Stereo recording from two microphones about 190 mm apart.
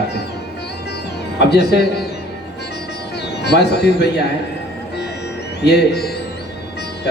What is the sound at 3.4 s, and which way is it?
Speech, 60° left (ahead or behind).